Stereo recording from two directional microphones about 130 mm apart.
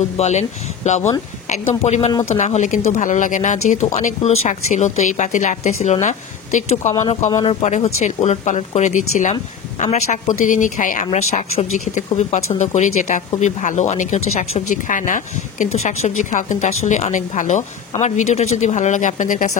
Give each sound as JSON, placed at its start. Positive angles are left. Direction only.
{"t": 0.2, "sound": "speech", "side_deg": 60}
{"t": 2.3, "sound": "speech", "side_deg": 65}
{"t": 9.3, "sound": "speech", "side_deg": 55}
{"t": 11.1, "sound": "speech", "side_deg": 60}
{"t": 18.0, "sound": "speech", "side_deg": 60}